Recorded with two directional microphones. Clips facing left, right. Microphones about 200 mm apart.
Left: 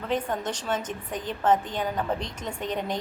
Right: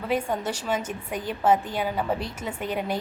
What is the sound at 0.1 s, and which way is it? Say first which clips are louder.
A woman's voice: right 2 dB; 10° right (ahead or behind).